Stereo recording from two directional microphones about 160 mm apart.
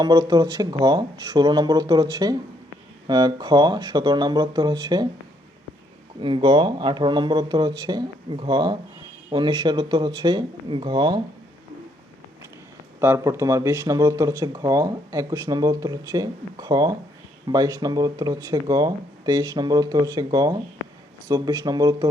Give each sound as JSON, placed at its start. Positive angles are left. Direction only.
{"t": 0.0, "sound": "speech", "side_deg": -25}
{"t": 6.1, "sound": "speech", "side_deg": -30}
{"t": 13.0, "sound": "speech", "side_deg": -15}